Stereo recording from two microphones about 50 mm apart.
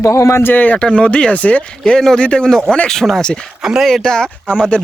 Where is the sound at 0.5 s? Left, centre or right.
Left.